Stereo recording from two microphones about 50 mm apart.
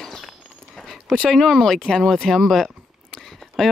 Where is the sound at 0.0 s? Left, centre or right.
Centre.